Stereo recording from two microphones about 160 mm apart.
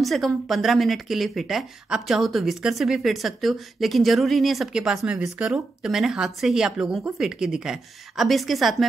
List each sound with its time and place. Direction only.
0.0 s speech: centre (ahead or behind)